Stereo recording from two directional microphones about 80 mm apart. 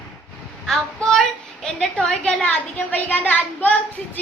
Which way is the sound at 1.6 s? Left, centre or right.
Centre.